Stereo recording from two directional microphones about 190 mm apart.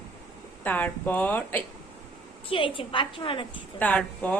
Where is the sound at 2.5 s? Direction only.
25° left (ahead or behind).